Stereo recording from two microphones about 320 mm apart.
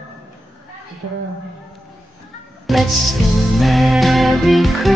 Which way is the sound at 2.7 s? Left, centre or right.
Centre.